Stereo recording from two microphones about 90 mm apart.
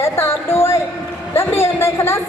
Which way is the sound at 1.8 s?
30° left (ahead or behind).